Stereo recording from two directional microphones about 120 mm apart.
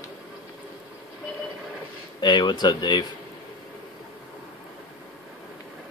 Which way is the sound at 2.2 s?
40° left (ahead or behind).